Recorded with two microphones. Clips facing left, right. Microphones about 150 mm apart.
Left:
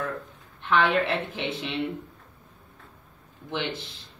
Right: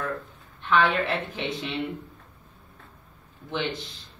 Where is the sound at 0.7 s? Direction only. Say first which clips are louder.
Even; 20° left (ahead or behind).